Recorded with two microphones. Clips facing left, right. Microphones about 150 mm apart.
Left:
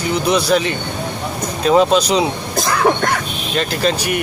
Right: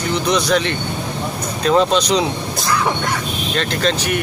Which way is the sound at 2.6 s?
55° left (ahead or behind).